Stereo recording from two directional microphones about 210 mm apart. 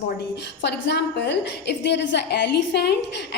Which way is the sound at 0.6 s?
55° left (ahead or behind).